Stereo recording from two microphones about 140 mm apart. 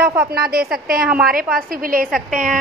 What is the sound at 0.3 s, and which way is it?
A woman's voice, 90° right.